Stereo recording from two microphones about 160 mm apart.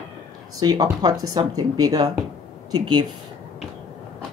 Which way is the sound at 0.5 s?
25° right (ahead or behind).